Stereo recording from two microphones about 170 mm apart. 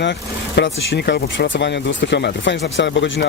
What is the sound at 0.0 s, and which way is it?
Speech, 90° left.